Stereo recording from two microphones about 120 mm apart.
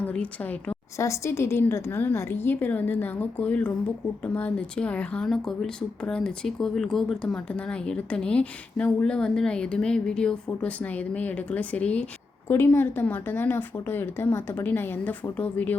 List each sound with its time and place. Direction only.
0.0 s a woman's voice: 10° left (ahead or behind)
0.9 s speech: 25° left (ahead or behind)